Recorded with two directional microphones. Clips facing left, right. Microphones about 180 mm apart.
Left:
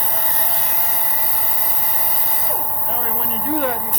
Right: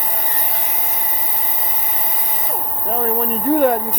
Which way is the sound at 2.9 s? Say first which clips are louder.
Right 9 dB; 50° right (ahead or behind).